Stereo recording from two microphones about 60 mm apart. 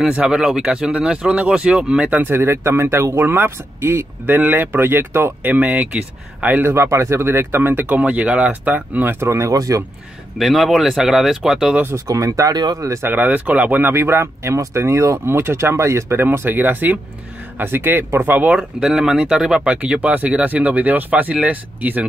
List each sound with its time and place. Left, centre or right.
0.2 s speech: centre
2.1 s speech: right
4.4 s speech: right
5.5 s speech: right
6.7 s speech: right
9.5 s speech: right
10.4 s speech: centre
12.1 s speech: right
13.0 s speech: right
13.9 s speech: right
16.2 s speech: right
18.6 s speech: centre; by 22.0 s right